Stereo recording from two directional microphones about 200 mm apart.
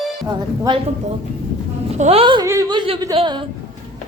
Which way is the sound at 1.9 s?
30° right (ahead or behind).